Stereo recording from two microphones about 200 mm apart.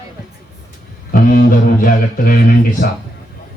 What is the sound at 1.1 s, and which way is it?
Music, 45° left (ahead or behind).